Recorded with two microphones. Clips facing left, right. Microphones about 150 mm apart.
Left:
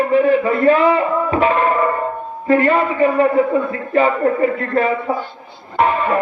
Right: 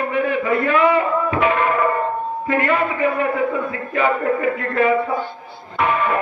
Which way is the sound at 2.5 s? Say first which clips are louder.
Left 6 dB; 30° left (ahead or behind).